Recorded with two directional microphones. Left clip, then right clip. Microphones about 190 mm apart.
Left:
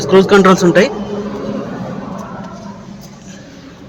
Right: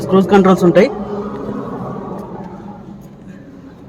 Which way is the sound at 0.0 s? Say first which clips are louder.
Left 3 dB; 10° left (ahead or behind).